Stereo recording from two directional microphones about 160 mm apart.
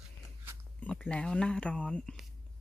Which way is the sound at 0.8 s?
10° left (ahead or behind).